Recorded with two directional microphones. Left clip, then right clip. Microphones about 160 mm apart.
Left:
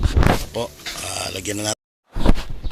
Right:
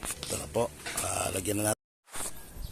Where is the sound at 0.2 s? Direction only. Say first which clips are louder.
Left 10 dB; 5° left (ahead or behind).